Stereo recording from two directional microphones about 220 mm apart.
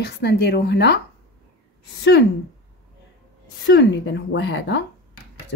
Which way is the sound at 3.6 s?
55° left (ahead or behind).